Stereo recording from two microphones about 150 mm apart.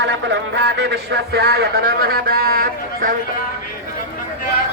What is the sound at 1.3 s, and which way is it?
A man's voice, 90° right.